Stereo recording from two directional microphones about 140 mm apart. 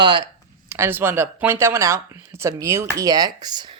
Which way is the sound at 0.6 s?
20° right (ahead or behind).